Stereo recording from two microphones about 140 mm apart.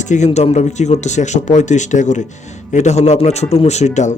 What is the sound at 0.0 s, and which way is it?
Speech, 60° left (ahead or behind).